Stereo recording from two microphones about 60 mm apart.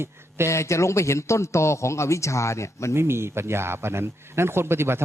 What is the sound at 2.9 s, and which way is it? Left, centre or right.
A man's voice, right.